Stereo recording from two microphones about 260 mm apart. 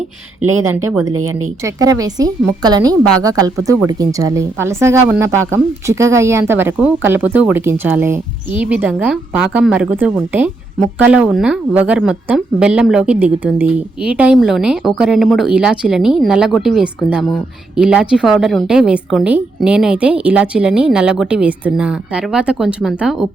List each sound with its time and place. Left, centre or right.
1.1 s speech: right
1.6 s a woman's voice: centre